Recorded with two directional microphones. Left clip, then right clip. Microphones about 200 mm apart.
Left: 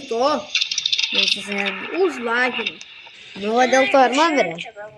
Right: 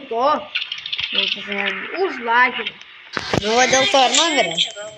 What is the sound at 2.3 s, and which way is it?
Speech, 45° left (ahead or behind).